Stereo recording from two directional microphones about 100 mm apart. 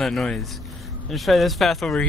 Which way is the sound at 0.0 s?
5° left (ahead or behind).